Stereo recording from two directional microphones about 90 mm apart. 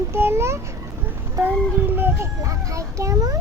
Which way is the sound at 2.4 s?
35° right (ahead or behind).